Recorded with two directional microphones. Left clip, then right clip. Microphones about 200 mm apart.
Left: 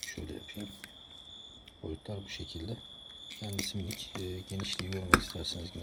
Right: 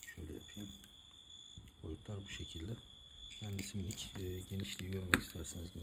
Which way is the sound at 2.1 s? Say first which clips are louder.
Left 7 dB; 5° left (ahead or behind).